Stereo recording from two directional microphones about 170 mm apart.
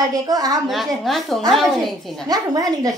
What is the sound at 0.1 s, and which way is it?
Speech, 20° right (ahead or behind).